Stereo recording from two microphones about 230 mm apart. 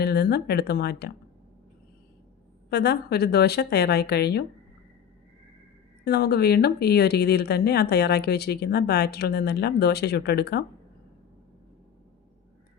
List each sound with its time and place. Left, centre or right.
0.0 s speech: left
2.6 s speech: left
6.1 s speech: left